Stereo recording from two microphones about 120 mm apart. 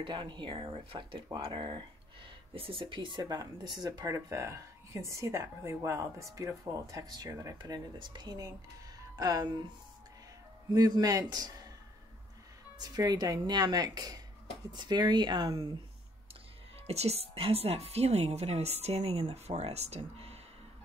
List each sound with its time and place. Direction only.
0.0 s speech: 45° right (ahead or behind)
10.7 s speech: 30° right (ahead or behind)
12.7 s speech: 35° right (ahead or behind)
16.8 s a woman's voice: 60° right (ahead or behind)